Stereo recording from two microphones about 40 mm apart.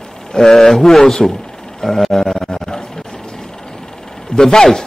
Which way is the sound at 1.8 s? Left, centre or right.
Centre.